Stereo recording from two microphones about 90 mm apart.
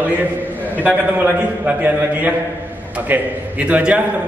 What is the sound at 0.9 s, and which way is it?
A man's voice, 20° right (ahead or behind).